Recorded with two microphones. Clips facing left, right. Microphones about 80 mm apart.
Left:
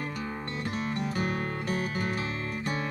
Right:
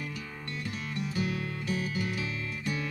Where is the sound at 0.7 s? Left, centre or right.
Left.